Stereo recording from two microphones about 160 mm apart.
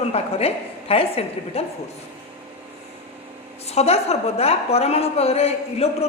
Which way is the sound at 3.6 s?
40° left (ahead or behind).